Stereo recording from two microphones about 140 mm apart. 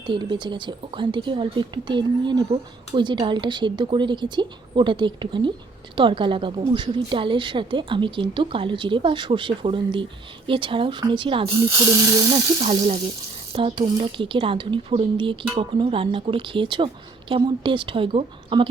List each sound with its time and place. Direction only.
0.1 s a woman's voice: 35° right (ahead or behind)
11.8 s speech: 25° right (ahead or behind)
12.6 s a woman's voice: 45° right (ahead or behind)